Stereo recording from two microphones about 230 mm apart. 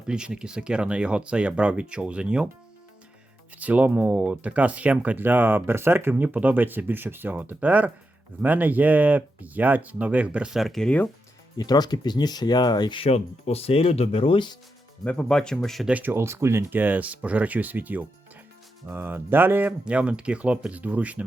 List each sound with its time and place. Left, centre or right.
0.1 s speech: centre
3.6 s speech: centre
11.5 s speech: centre
15.0 s speech: centre